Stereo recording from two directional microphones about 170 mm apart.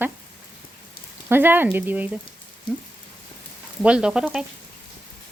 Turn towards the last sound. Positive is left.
turn(degrees=-5)  # may be behind; listen again after turning